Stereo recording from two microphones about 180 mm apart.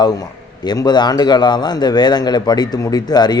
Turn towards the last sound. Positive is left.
turn(degrees=20)  # may be behind; listen again after turning